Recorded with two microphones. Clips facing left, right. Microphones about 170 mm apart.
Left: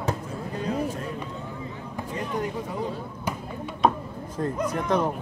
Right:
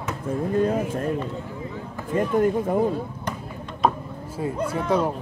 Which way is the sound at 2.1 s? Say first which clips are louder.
Right 10 dB; 50° right (ahead or behind).